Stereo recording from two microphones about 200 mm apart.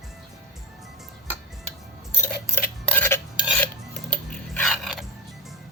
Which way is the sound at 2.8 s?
10° left (ahead or behind).